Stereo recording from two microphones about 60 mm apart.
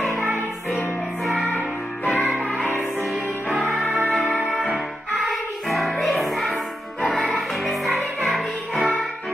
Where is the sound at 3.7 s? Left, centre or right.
Centre.